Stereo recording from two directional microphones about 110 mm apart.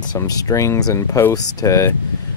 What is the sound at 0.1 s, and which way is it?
Speech, 35° left (ahead or behind).